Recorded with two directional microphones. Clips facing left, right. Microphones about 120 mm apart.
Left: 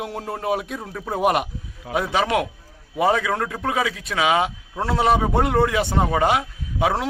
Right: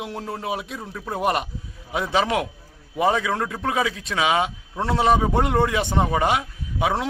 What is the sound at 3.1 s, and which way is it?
Speech, 20° right (ahead or behind).